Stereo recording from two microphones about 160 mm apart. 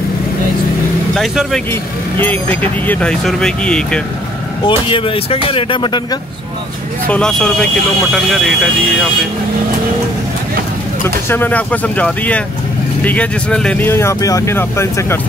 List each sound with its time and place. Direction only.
1.1 s speech: centre (ahead or behind)
1.7 s speech: 10° left (ahead or behind)
4.6 s speech: 35° left (ahead or behind)
7.1 s speech: 5° left (ahead or behind)
11.1 s speech: 15° left (ahead or behind)